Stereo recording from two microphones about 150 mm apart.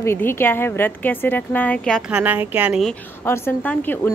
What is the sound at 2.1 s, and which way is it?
Speech, 10° right (ahead or behind).